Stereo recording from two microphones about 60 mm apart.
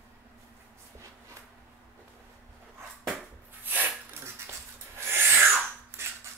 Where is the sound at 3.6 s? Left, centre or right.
Right.